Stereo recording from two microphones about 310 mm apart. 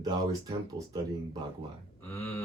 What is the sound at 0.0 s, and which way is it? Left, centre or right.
Speech, centre.